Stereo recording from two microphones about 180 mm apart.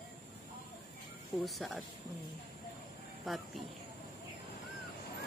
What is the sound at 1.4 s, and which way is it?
Speech, centre (ahead or behind).